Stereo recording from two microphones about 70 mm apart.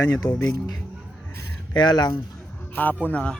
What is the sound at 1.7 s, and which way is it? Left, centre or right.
Speech, left.